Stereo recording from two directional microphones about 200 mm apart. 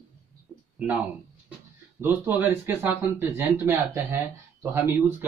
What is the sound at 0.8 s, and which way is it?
Speech, 5° right (ahead or behind).